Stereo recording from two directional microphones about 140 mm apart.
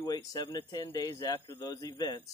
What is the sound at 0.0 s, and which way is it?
Speech, 25° left (ahead or behind).